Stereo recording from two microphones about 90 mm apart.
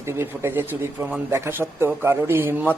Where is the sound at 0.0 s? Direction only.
30° right (ahead or behind).